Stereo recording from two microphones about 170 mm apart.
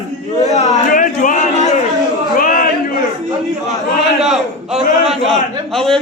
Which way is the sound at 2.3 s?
55° left (ahead or behind).